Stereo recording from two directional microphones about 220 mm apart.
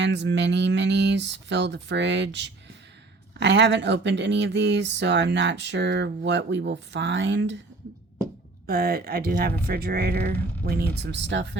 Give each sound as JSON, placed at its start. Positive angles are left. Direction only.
{"t": 0.0, "sound": "speech", "side_deg": -55}
{"t": 8.6, "sound": "speech", "side_deg": -45}